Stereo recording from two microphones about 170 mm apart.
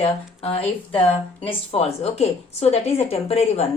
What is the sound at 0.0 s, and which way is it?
A woman's voice, 35° left (ahead or behind).